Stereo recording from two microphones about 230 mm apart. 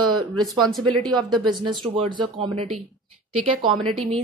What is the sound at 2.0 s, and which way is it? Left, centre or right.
Speech, right.